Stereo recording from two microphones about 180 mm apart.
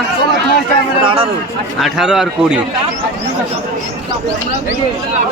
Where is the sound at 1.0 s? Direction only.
30° right (ahead or behind).